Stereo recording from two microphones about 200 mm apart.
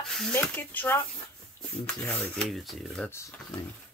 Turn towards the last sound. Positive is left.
turn(degrees=10)  # may be behind; listen again after turning